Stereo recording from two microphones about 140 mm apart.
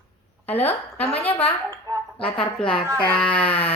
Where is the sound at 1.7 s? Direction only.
25° right (ahead or behind).